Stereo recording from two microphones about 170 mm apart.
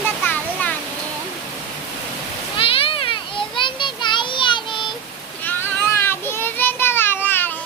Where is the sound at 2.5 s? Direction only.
30° left (ahead or behind).